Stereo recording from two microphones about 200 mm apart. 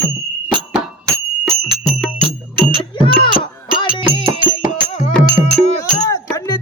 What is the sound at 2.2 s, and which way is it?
Music, 25° right (ahead or behind).